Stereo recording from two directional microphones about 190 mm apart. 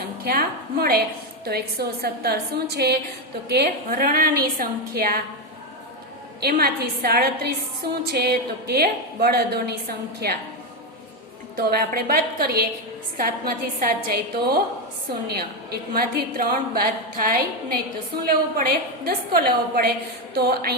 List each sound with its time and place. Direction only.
0.0 s a woman's voice: 55° right (ahead or behind)
6.4 s a woman's voice: 55° right (ahead or behind)
11.5 s a woman's voice: 55° right (ahead or behind)